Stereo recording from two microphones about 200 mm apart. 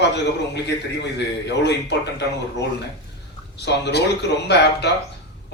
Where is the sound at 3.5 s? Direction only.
60° left (ahead or behind).